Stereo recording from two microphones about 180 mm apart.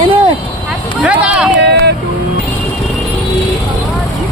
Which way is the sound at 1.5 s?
65° right (ahead or behind).